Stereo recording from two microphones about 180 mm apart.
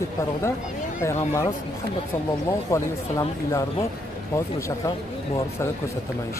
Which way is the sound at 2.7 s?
15° left (ahead or behind).